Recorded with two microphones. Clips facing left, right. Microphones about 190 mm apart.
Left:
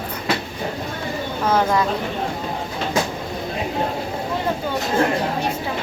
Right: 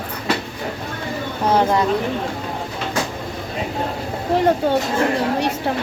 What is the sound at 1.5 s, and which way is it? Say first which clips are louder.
Speech: right 2 dB; 30° right (ahead or behind).